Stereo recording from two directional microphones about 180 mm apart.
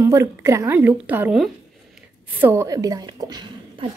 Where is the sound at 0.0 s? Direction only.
15° right (ahead or behind).